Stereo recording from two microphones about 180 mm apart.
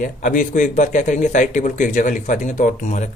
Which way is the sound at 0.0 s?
45° left (ahead or behind).